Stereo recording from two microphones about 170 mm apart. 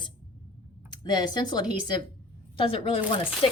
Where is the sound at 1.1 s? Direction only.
25° left (ahead or behind).